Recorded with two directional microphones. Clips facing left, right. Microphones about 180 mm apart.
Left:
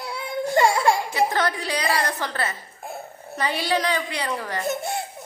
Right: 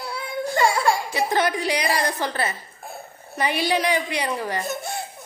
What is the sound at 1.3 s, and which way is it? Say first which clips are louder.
A woman's voice: right 3 dB; 15° right (ahead or behind).